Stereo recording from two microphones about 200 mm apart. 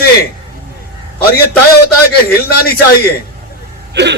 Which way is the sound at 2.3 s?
50° left (ahead or behind).